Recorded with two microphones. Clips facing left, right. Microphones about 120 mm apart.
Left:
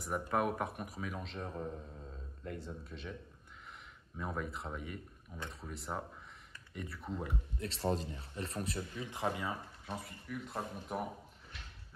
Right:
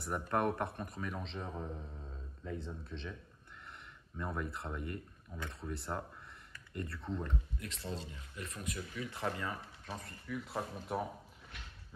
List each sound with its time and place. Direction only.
0.0 s a man's voice: 5° left (ahead or behind)
4.2 s a man's voice: centre (ahead or behind)
7.5 s speech: 30° left (ahead or behind); by 11.0 s 5° right (ahead or behind)